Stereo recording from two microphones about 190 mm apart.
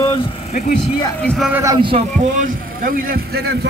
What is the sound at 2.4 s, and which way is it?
A man's voice, 50° right (ahead or behind).